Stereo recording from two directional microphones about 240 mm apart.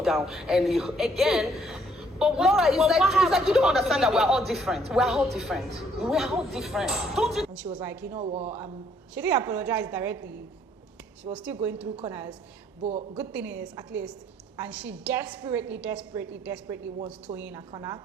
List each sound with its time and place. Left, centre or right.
0.0 s a woman's voice: centre
8.2 s speech: right
9.1 s a woman's voice: centre
12.8 s speech: right
13.1 s a woman's voice: centre